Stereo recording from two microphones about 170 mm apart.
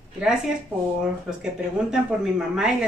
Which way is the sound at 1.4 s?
5° right (ahead or behind).